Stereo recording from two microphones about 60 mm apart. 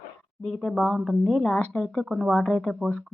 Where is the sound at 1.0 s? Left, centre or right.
Centre.